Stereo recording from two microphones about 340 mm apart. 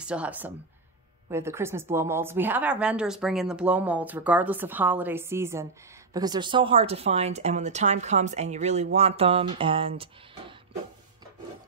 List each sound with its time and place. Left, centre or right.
0.0 s a woman's voice: centre